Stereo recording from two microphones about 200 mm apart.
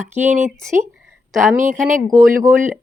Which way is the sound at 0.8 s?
Centre (ahead or behind).